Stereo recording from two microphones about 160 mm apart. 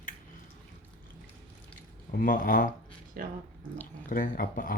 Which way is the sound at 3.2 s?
65° right (ahead or behind).